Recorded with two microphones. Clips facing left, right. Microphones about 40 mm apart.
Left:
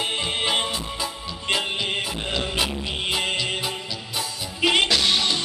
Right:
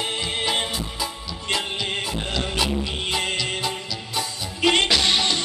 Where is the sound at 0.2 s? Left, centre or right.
Left.